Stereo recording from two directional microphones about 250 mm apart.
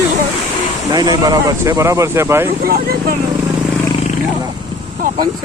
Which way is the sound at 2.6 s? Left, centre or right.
Right.